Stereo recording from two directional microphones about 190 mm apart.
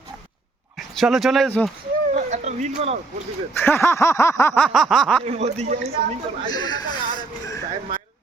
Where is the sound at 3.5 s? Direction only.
10° left (ahead or behind).